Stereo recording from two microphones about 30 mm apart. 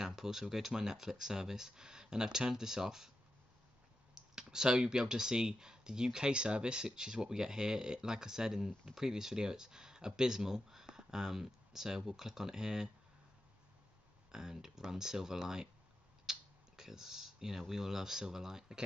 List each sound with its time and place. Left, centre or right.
0.0 s speech: centre
4.1 s speech: centre
6.3 s speech: right; by 12.8 s centre
14.3 s speech: centre